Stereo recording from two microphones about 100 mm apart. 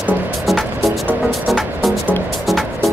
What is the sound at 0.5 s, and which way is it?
Music, centre (ahead or behind).